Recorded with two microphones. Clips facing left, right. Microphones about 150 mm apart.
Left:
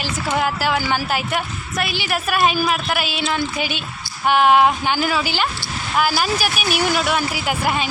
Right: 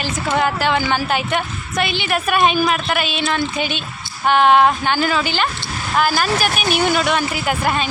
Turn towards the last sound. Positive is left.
turn(degrees=10)  # may be behind; listen again after turning